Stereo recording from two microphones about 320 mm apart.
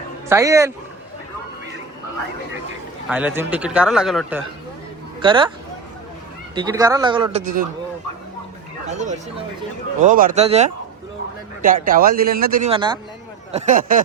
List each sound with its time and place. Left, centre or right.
0.3 s a man's voice: centre
3.1 s speech: centre
5.2 s a man's voice: centre
6.5 s a man's voice: centre
8.9 s a man's voice: right